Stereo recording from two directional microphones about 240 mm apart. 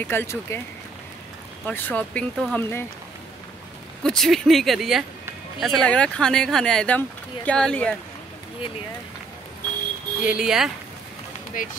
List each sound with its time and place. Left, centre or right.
0.0 s speech: centre
1.7 s speech: centre
4.0 s speech: centre
10.2 s speech: centre
11.6 s speech: left